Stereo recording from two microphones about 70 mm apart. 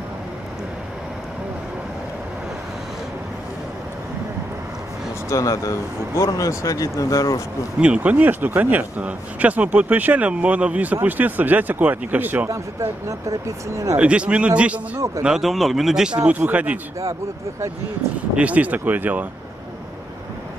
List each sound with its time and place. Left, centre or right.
5.3 s speech: left
7.8 s speech: centre
12.4 s speech: right
13.9 s speech: centre
15.2 s speech: centre; by 16.8 s right
18.3 s speech: centre